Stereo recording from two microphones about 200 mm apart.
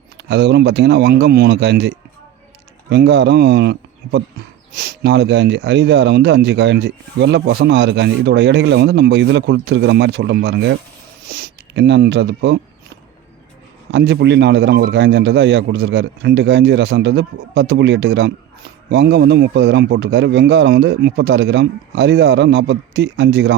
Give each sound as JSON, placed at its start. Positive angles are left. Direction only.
{"t": 0.3, "sound": "a man's voice", "side_deg": -60}
{"t": 13.9, "sound": "a man's voice", "side_deg": -60}